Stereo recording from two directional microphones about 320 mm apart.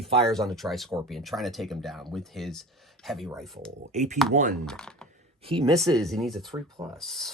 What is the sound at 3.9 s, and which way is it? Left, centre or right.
Speech, right.